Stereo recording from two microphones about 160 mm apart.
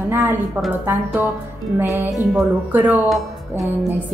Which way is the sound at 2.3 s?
10° right (ahead or behind).